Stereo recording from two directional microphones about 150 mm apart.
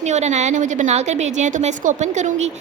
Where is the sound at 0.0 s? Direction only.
50° right (ahead or behind).